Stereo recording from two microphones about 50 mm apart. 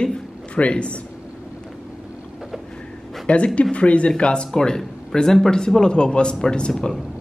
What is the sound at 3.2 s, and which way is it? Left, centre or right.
Speech, left.